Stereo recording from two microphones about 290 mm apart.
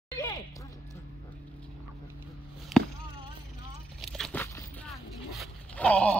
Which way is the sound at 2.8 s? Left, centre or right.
Centre.